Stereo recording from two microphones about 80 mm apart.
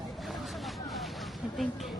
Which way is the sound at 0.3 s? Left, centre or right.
Centre.